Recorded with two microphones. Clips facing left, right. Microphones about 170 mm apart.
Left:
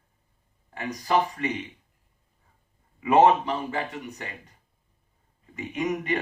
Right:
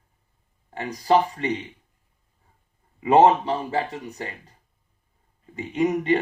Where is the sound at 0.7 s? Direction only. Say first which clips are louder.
Right 5 dB; 30° right (ahead or behind).